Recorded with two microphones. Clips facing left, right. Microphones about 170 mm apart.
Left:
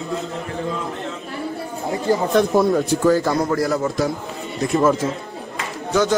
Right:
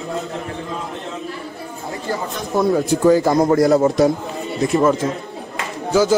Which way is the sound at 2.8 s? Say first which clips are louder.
Right 3 dB; 15° right (ahead or behind).